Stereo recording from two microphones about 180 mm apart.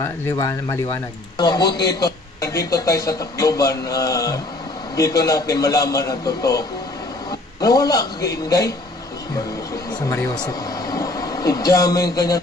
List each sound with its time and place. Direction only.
0.0 s a man's voice: 15° left (ahead or behind)
9.9 s speech: 20° left (ahead or behind)